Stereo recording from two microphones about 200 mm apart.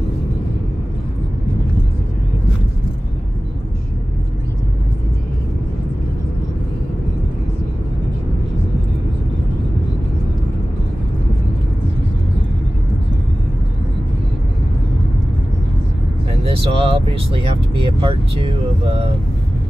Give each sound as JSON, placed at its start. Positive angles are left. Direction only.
{"t": 16.4, "sound": "speech", "side_deg": -30}